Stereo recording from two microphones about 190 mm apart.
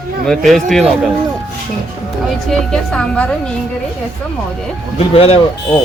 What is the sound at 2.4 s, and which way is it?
Speech, centre (ahead or behind).